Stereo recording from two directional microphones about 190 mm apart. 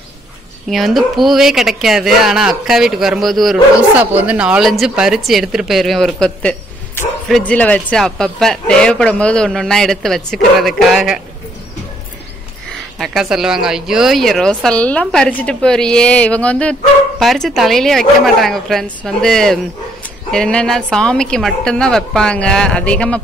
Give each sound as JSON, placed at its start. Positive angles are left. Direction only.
{"t": 0.7, "sound": "speech", "side_deg": 0}
{"t": 13.0, "sound": "speech", "side_deg": 0}